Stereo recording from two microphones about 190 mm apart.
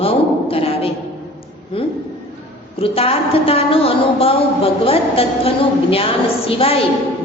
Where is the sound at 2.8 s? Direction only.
30° left (ahead or behind).